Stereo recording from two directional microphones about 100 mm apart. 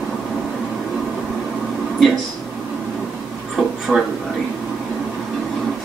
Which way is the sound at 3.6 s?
Centre (ahead or behind).